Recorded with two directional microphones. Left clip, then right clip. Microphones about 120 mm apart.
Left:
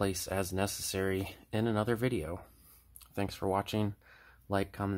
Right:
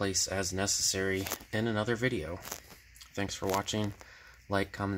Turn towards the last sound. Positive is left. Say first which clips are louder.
# right 2 dB
turn(degrees=0)  # may be behind; listen again after turning